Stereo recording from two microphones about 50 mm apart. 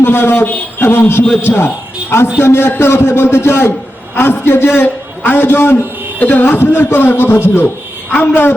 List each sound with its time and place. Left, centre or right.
0.0 s a man's voice: left
6.1 s carnatic music: left
6.4 s a man's voice: left